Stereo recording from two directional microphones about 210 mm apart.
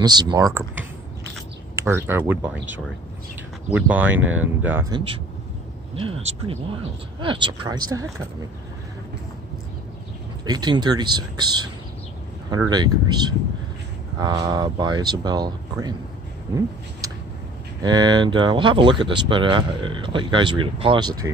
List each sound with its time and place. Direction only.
0.0 s speech: 20° right (ahead or behind)
1.8 s speech: 10° right (ahead or behind)
3.7 s speech: 10° right (ahead or behind)
4.9 s speech: 25° right (ahead or behind)
10.4 s speech: 20° right (ahead or behind)
17.8 s speech: 20° right (ahead or behind)